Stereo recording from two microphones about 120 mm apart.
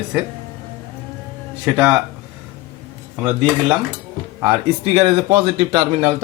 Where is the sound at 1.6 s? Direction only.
15° right (ahead or behind).